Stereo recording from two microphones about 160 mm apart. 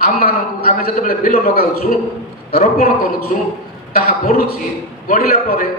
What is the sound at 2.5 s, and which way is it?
A man's voice, 65° left (ahead or behind).